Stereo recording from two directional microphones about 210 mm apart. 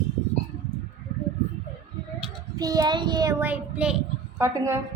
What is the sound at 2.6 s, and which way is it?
Child singing, 15° right (ahead or behind).